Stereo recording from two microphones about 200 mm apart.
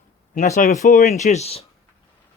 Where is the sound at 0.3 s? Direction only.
35° left (ahead or behind).